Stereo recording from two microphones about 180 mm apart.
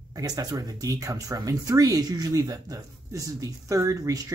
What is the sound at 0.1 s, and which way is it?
Speech, 20° right (ahead or behind).